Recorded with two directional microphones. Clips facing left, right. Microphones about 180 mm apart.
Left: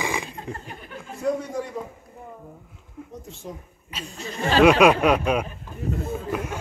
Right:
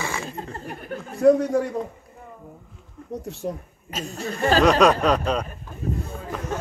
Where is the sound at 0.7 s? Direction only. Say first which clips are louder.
Right 5 dB; 55° right (ahead or behind).